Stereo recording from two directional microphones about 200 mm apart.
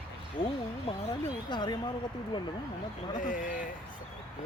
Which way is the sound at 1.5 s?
20° left (ahead or behind).